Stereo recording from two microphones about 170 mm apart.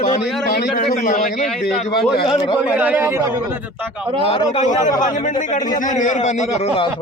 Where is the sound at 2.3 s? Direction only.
30° left (ahead or behind).